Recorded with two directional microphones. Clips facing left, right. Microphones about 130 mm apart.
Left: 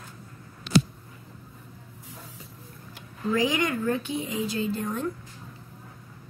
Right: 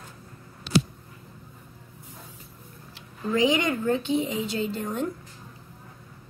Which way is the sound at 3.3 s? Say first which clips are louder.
Right 3 dB; 25° right (ahead or behind).